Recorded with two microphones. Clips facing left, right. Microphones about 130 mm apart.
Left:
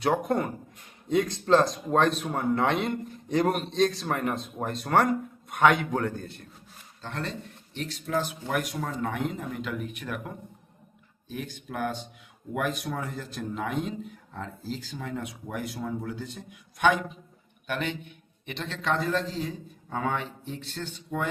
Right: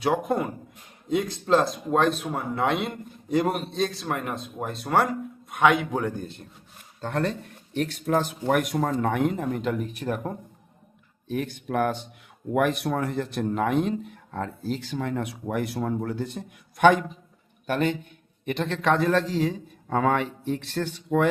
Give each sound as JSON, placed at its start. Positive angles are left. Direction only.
{"t": 0.0, "sound": "speech", "side_deg": 0}
{"t": 5.9, "sound": "a man's voice", "side_deg": -15}
{"t": 7.0, "sound": "speech", "side_deg": -55}
{"t": 11.3, "sound": "speech", "side_deg": -55}
{"t": 17.7, "sound": "speech", "side_deg": -40}